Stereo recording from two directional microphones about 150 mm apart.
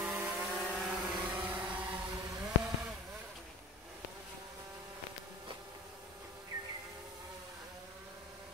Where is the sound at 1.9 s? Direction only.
25° right (ahead or behind).